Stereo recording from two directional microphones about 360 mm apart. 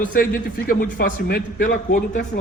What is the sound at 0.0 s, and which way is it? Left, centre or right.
A man's voice, left.